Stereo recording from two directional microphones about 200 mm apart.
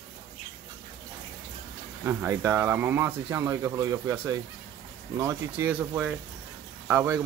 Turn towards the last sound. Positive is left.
turn(degrees=-10)  # may be behind; listen again after turning